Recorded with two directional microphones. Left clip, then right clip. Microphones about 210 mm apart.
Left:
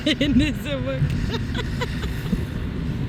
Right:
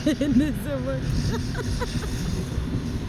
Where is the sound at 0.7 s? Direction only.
5° left (ahead or behind).